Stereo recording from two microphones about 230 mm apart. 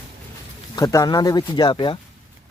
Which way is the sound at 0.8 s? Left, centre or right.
Centre.